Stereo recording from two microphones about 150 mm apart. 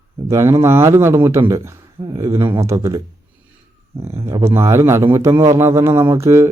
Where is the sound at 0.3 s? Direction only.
20° right (ahead or behind).